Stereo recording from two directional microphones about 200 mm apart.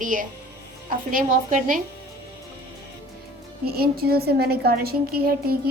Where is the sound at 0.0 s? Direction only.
40° right (ahead or behind).